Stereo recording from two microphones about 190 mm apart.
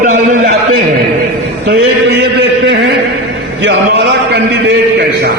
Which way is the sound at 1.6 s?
65° right (ahead or behind).